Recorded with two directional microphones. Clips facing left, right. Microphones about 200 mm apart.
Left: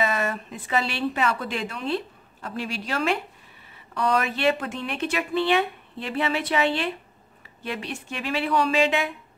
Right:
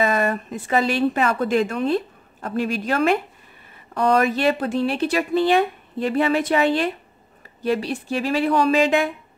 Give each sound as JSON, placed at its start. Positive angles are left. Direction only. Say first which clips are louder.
{"t": 0.0, "sound": "speech", "louder": "right 5 dB", "side_deg": -45}